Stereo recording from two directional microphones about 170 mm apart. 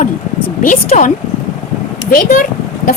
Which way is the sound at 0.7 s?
50° left (ahead or behind).